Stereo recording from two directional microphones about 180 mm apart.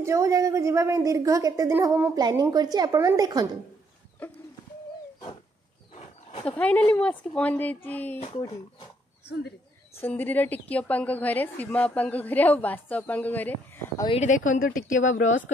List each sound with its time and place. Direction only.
0.0 s a woman's voice: 15° right (ahead or behind)
4.2 s a woman's voice: 10° left (ahead or behind)
6.4 s a woman's voice: 5° left (ahead or behind)
9.9 s a woman's voice: 10° left (ahead or behind)
14.0 s a woman's voice: 35° left (ahead or behind)